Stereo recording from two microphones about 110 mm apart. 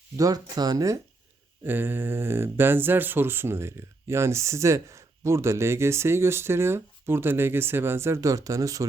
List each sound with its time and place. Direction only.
0.2 s speech: 35° right (ahead or behind)
1.6 s speech: 20° right (ahead or behind)